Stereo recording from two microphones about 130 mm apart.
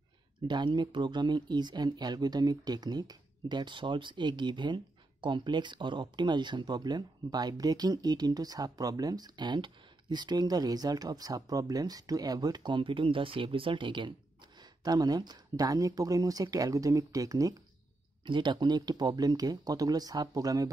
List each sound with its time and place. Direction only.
0.5 s speech: 35° right (ahead or behind)